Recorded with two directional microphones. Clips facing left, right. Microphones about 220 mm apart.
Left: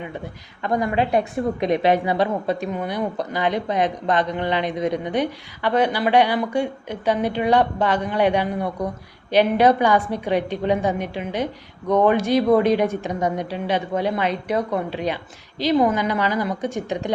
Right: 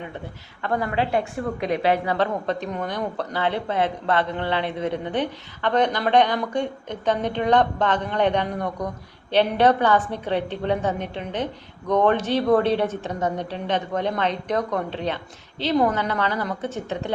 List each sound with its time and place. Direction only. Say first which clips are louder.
0.6 s a woman's voice: left 3 dB; 15° left (ahead or behind)